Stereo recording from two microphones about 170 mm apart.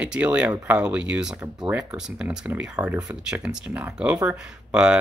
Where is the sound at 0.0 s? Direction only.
5° right (ahead or behind).